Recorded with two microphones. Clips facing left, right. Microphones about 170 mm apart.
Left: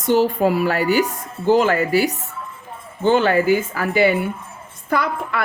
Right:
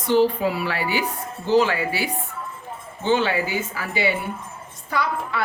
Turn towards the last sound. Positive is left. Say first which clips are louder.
# left 4 dB
turn(degrees=55)  # may be behind; listen again after turning